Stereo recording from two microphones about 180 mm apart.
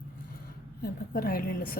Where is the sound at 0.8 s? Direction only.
55° left (ahead or behind).